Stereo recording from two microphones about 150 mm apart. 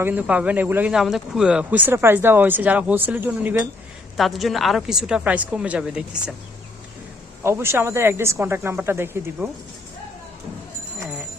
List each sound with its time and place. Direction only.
0.0 s a man's voice: 10° right (ahead or behind)
4.2 s a woman's voice: centre (ahead or behind)
7.4 s a man's voice: 15° right (ahead or behind)